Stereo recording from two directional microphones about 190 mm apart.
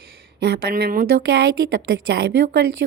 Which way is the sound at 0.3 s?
60° right (ahead or behind).